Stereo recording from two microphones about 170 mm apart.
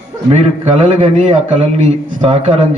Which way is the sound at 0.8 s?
35° right (ahead or behind).